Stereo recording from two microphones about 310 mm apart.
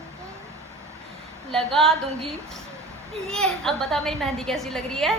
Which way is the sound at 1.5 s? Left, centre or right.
Centre.